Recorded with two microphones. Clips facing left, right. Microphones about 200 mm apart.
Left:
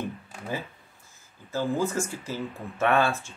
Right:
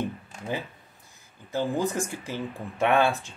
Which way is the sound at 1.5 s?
15° right (ahead or behind).